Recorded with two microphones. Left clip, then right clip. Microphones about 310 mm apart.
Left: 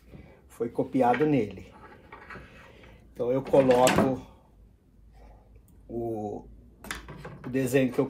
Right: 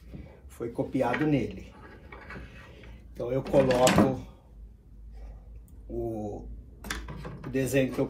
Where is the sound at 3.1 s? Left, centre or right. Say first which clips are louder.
Left 4 dB; left.